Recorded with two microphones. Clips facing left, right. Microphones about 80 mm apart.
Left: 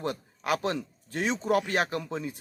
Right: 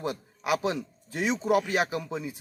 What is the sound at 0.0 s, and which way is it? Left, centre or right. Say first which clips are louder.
Speech: even; centre.